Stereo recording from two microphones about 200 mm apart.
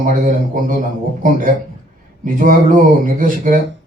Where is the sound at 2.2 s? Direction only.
40° right (ahead or behind).